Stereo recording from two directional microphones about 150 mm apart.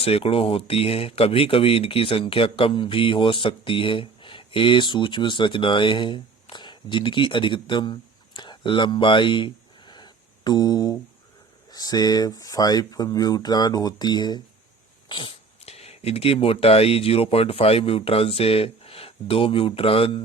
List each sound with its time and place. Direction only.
0.0 s speech: 40° left (ahead or behind)